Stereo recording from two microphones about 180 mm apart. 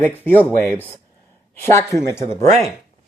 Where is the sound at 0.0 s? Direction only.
10° left (ahead or behind).